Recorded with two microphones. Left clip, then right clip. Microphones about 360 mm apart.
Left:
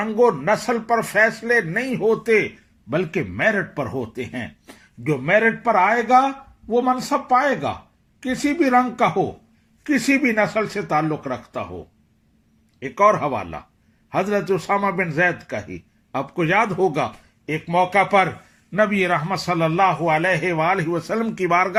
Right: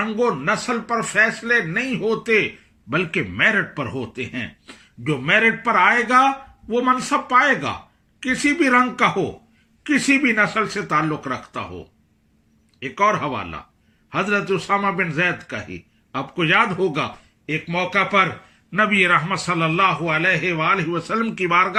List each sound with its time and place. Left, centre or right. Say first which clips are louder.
0.0 s speech: left 3 dB; centre
12.8 s speech: left 2 dB; centre